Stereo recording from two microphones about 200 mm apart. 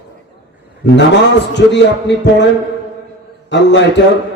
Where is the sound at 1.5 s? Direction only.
60° left (ahead or behind).